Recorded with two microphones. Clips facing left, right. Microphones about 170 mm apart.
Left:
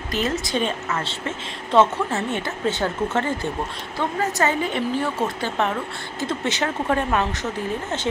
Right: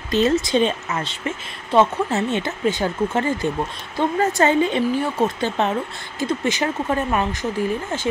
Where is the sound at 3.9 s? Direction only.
25° right (ahead or behind).